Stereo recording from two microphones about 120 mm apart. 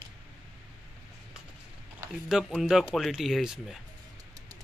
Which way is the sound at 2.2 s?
5° right (ahead or behind).